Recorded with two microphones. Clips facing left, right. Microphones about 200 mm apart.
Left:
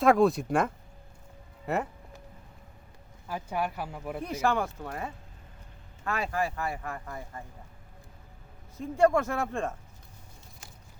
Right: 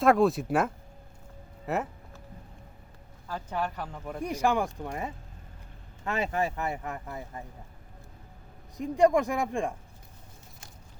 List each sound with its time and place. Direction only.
0.0 s speech: centre (ahead or behind)
3.2 s speech: 10° left (ahead or behind)
4.2 s speech: 15° right (ahead or behind)
8.8 s speech: 15° right (ahead or behind)